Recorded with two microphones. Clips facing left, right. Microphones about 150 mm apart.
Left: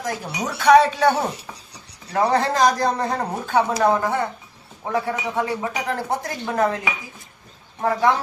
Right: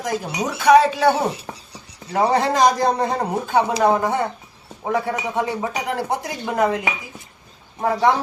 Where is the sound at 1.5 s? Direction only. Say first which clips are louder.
Right 4 dB; 45° right (ahead or behind).